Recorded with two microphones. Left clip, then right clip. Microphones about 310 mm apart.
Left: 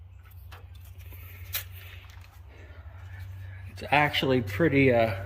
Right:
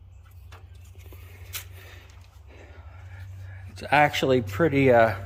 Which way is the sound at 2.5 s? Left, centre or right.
Centre.